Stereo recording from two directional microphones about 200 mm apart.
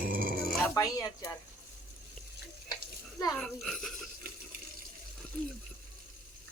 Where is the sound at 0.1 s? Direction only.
45° right (ahead or behind).